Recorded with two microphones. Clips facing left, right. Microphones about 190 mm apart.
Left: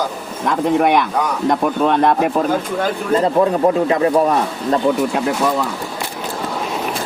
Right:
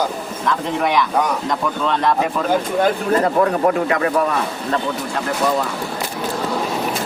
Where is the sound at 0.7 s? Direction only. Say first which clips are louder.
Left 4 dB; 55° left (ahead or behind).